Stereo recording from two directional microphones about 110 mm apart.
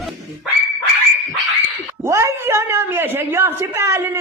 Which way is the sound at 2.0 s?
25° right (ahead or behind).